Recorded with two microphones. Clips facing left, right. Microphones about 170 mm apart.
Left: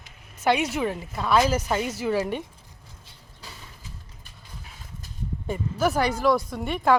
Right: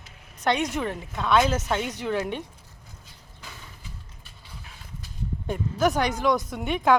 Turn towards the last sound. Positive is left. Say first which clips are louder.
# even
turn(degrees=0)  # may be behind; listen again after turning